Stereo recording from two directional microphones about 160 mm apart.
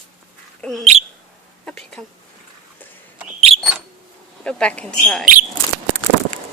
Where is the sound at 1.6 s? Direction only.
5° left (ahead or behind).